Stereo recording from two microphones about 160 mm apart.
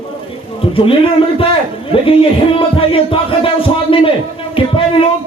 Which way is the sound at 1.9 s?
35° left (ahead or behind).